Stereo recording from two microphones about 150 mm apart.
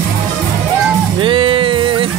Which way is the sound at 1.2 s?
35° right (ahead or behind).